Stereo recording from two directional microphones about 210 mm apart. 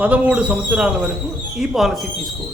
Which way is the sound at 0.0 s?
5° right (ahead or behind).